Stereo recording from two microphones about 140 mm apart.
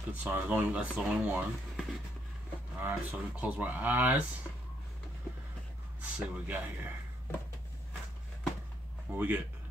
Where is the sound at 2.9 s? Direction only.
10° right (ahead or behind).